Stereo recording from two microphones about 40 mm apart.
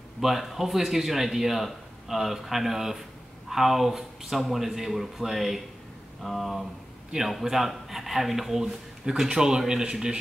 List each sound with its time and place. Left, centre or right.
0.2 s speech: centre